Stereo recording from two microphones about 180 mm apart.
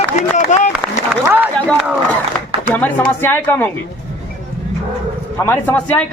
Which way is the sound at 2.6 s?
10° left (ahead or behind).